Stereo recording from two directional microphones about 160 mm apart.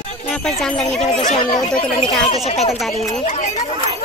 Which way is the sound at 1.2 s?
45° left (ahead or behind).